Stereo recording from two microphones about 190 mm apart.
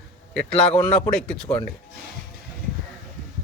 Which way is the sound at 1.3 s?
5° left (ahead or behind).